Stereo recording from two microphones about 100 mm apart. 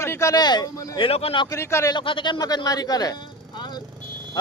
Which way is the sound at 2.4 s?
40° left (ahead or behind).